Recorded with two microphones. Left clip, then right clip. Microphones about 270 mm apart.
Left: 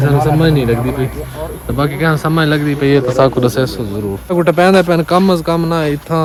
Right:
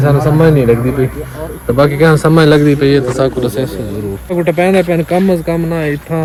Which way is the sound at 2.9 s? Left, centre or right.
Centre.